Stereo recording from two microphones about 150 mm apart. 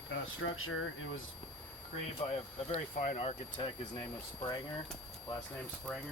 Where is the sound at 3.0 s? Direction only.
50° left (ahead or behind).